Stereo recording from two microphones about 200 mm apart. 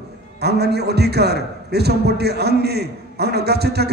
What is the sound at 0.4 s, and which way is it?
A man's voice, 55° right (ahead or behind).